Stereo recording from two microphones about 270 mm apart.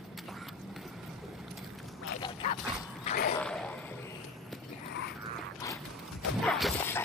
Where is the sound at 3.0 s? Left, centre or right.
Left.